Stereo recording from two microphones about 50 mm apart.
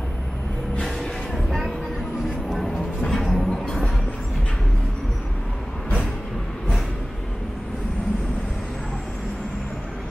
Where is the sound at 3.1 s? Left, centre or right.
Centre.